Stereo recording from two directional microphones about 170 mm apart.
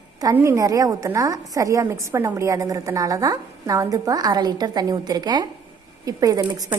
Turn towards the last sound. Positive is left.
turn(degrees=-20)  # may be behind; listen again after turning